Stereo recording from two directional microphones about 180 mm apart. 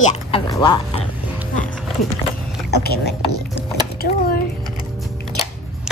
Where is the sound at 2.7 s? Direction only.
60° left (ahead or behind).